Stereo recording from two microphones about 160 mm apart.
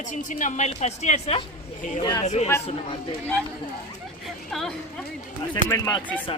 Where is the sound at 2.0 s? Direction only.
25° left (ahead or behind).